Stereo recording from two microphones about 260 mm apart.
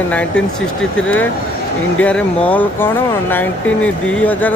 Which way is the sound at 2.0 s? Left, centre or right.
Centre.